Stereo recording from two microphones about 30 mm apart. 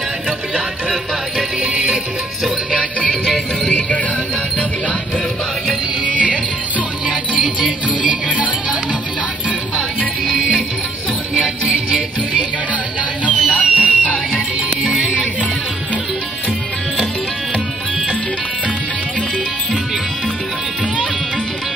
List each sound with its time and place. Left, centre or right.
1.6 s music: right
3.6 s music: left
7.1 s music: right
10.2 s music: centre
13.2 s music: left
14.8 s music: centre